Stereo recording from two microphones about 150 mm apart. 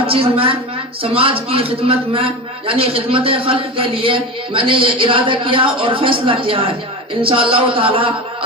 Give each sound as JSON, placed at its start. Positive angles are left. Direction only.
{"t": 0.1, "sound": "a man's voice", "side_deg": -40}